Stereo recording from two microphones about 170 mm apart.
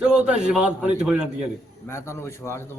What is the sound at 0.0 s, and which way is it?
A man's voice, 5° right (ahead or behind).